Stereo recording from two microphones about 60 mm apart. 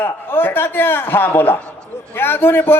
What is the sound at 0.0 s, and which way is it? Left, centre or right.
A man's voice, left.